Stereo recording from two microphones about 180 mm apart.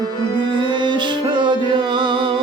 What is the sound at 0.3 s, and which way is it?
Music, 25° right (ahead or behind).